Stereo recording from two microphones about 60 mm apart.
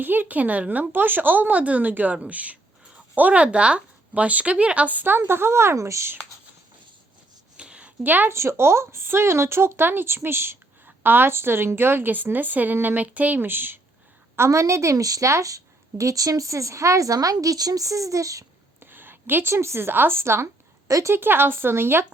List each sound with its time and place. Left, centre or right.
0.0 s speech: right
7.5 s a sound: centre
8.3 s a woman's voice: right
14.3 s a woman's voice: right
18.8 s a woman's voice: right
20.8 s speech: right
21.1 s a woman's voice: right